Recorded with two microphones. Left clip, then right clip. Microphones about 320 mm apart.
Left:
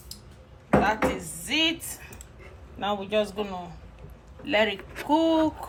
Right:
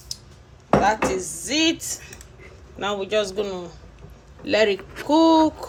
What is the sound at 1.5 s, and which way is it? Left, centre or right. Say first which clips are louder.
Speech: right 3 dB; centre.